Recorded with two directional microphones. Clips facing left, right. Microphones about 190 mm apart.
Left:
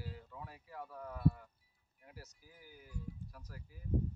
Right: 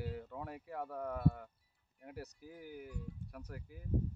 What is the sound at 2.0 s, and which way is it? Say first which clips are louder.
Speech: right 9 dB; 60° right (ahead or behind).